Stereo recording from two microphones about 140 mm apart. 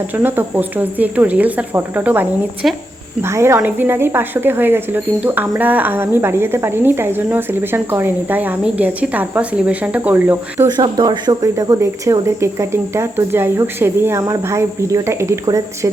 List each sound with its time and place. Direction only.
0.2 s a woman's voice: 15° right (ahead or behind)
2.6 s speech: 5° right (ahead or behind)
3.2 s a woman's voice: 20° right (ahead or behind)
10.8 s speech: 30° right (ahead or behind)